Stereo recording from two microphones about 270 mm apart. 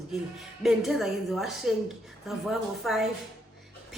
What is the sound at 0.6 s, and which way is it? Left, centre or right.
A woman's voice, centre.